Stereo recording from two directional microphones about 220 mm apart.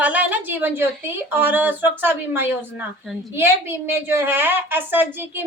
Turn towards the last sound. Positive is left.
turn(degrees=-10)  # may be behind; listen again after turning